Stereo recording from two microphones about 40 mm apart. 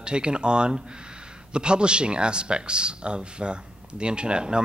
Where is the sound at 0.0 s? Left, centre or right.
Right.